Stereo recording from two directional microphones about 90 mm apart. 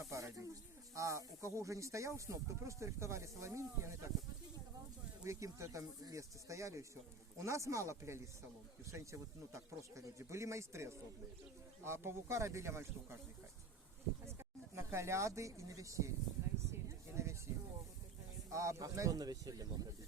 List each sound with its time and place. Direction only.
0.1 s speech: 35° right (ahead or behind)
5.2 s speech: 35° right (ahead or behind)
14.3 s speech: 30° right (ahead or behind)
16.7 s a sound: 30° right (ahead or behind)
18.5 s speech: 35° right (ahead or behind)